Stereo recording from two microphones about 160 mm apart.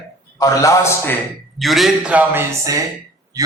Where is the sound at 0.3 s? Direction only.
20° left (ahead or behind).